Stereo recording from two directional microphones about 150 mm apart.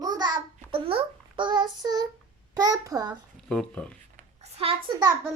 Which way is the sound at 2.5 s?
25° right (ahead or behind).